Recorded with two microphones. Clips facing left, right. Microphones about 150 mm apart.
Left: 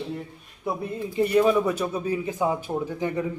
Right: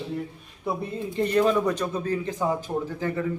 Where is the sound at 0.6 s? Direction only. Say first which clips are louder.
Even; 5° left (ahead or behind).